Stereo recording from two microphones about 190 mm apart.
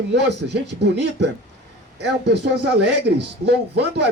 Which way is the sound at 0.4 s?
75° right (ahead or behind).